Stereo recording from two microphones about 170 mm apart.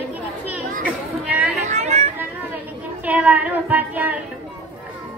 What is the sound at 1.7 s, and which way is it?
Speech, 45° right (ahead or behind).